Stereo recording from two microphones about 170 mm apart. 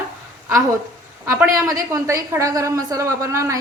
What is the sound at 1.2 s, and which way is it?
A woman's voice, 20° right (ahead or behind).